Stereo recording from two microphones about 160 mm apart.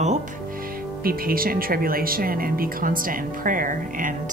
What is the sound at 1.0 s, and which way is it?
Speech, 65° right (ahead or behind).